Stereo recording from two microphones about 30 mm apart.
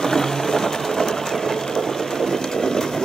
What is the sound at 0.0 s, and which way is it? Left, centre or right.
Sewing machine, centre.